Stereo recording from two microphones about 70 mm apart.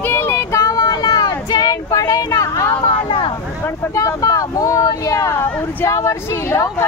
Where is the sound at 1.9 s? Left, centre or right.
Left.